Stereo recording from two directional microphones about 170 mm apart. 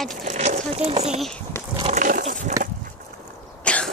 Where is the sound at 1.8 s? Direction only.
40° right (ahead or behind).